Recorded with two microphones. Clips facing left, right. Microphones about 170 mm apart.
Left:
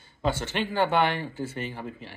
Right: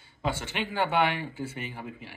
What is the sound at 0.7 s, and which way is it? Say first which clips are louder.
Speech: left 2 dB; 5° right (ahead or behind).